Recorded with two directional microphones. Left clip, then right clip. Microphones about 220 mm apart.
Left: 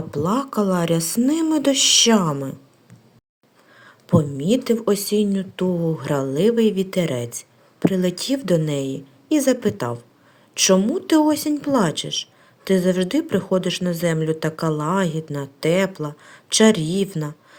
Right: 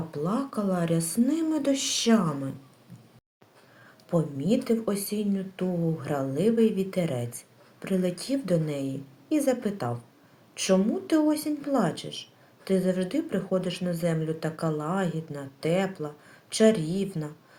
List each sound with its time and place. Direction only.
0.1 s speech: 45° left (ahead or behind)
4.1 s a woman's voice: 40° left (ahead or behind)